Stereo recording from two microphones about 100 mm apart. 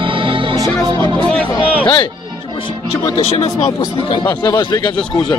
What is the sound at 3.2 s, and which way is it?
Speech, 90° left.